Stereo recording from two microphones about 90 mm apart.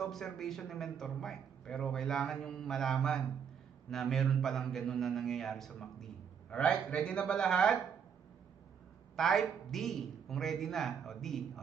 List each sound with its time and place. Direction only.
0.0 s a man's voice: 5° left (ahead or behind)
9.1 s speech: 5° left (ahead or behind)